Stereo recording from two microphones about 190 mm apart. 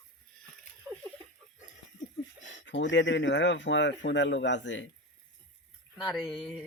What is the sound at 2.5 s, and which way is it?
Speech, 75° left (ahead or behind).